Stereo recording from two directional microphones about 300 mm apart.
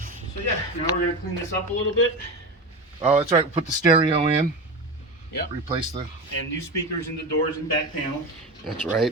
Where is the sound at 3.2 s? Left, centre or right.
Right.